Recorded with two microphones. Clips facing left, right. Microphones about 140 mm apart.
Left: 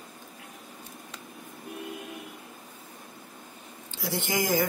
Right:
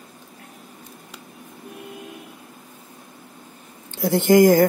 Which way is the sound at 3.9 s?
55° right (ahead or behind).